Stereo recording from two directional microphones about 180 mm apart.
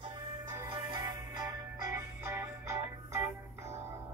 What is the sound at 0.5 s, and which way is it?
Music, 20° right (ahead or behind).